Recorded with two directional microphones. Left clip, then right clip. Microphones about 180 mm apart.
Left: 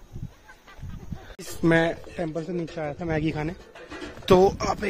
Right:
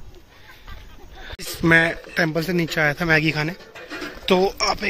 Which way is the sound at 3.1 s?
15° left (ahead or behind).